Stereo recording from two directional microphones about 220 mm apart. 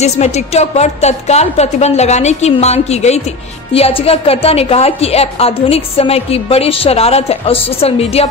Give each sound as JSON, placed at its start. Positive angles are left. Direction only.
{"t": 0.0, "sound": "a woman's voice", "side_deg": 30}